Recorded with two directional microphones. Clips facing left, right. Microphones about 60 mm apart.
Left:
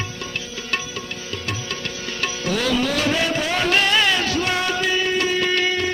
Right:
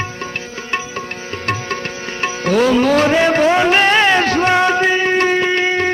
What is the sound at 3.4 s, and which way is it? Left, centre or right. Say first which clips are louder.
Music: right 8 dB; right.